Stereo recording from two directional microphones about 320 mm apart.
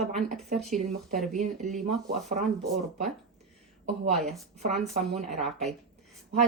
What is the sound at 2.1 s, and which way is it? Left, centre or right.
Speech, right.